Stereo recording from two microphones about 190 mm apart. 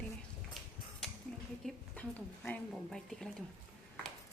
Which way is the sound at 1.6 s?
5° left (ahead or behind).